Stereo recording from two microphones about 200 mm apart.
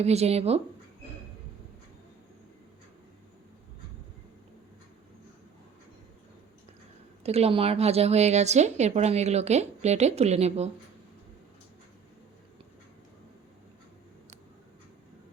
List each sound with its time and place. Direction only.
0.0 s a woman's voice: 30° right (ahead or behind)
7.3 s a woman's voice: 30° right (ahead or behind)